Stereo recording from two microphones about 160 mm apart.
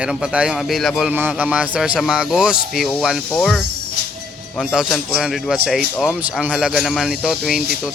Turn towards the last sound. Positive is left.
turn(degrees=-5)  # may be behind; listen again after turning